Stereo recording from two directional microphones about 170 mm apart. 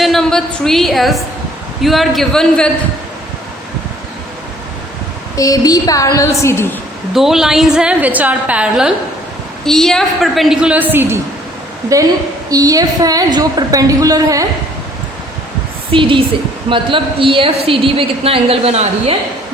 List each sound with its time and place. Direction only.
0.0 s a woman's voice: centre (ahead or behind)
5.4 s a woman's voice: 20° left (ahead or behind)
7.1 s a woman's voice: centre (ahead or behind); by 14.4 s 20° right (ahead or behind)
15.9 s a woman's voice: 30° right (ahead or behind)